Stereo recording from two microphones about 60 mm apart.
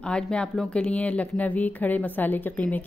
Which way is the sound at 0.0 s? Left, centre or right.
Centre.